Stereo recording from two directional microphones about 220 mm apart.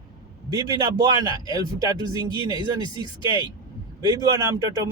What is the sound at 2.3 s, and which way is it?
Speech, 20° left (ahead or behind).